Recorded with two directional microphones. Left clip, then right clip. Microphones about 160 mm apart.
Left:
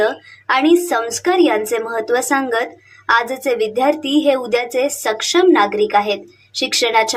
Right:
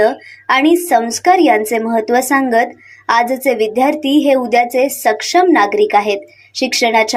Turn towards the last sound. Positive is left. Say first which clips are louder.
# right 2 dB
turn(degrees=-15)  # may be behind; listen again after turning